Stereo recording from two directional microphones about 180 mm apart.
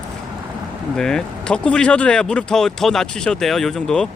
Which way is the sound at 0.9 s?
5° left (ahead or behind).